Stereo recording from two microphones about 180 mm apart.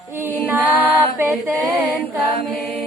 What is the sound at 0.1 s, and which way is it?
Music, 10° right (ahead or behind).